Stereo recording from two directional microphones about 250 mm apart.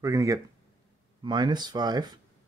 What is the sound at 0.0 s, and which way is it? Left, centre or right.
Speech, centre.